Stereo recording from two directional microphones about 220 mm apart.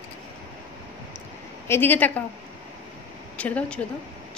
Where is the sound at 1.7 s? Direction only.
10° left (ahead or behind).